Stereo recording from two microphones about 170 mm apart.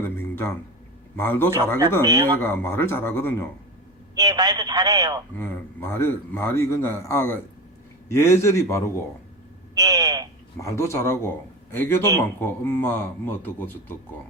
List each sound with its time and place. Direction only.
0.0 s a sound: 15° left (ahead or behind)
1.1 s a man's voice: 15° left (ahead or behind)
2.0 s a man's voice: 25° right (ahead or behind)
2.4 s a man's voice: 15° left (ahead or behind)
4.1 s a man's voice: 25° right (ahead or behind)
5.4 s a man's voice: 15° left (ahead or behind)
9.7 s a sound: 25° right (ahead or behind)
10.6 s a man's voice: 15° left (ahead or behind)